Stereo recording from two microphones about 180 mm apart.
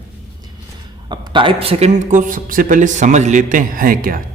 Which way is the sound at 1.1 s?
25° right (ahead or behind).